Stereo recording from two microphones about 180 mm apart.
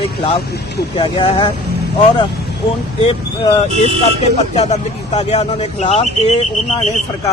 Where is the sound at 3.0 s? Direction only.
30° left (ahead or behind).